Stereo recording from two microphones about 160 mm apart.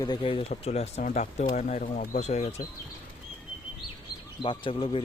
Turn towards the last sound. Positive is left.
turn(degrees=30)  # may be behind; listen again after turning